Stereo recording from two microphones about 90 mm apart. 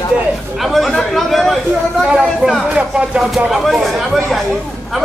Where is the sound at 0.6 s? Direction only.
Centre (ahead or behind).